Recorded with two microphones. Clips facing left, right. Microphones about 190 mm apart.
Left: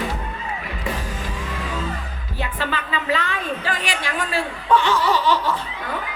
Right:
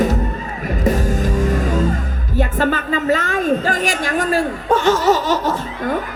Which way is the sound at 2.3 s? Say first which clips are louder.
Right 9 dB; 45° right (ahead or behind).